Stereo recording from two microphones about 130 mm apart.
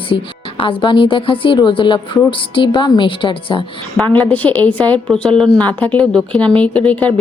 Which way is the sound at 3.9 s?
10° left (ahead or behind).